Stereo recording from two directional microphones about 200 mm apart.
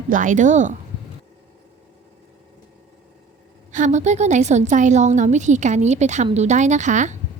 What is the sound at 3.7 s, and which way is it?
A woman's voice, 40° right (ahead or behind).